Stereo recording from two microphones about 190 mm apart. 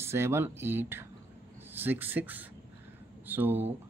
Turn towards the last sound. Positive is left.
turn(degrees=-10)  # may be behind; listen again after turning